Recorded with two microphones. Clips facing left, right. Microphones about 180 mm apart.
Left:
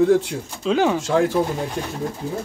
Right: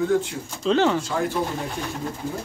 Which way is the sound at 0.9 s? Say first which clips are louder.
Left 6 dB; 90° left.